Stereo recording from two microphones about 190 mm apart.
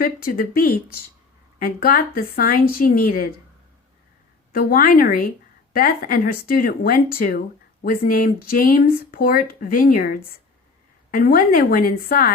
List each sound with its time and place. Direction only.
0.0 s speech: 50° left (ahead or behind)
4.5 s speech: 50° left (ahead or behind)